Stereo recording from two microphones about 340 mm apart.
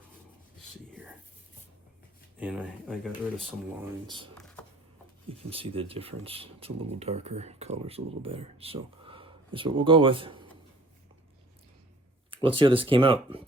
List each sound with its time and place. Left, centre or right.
0.9 s whispering: centre
2.4 s speech: centre
4.0 s speech: centre
4.4 s a sound: centre
5.4 s speech: centre
12.3 s speech: centre